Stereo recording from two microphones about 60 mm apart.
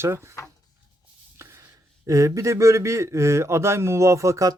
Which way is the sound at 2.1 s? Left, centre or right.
Right.